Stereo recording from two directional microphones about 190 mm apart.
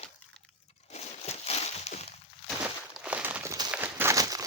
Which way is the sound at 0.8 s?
35° left (ahead or behind).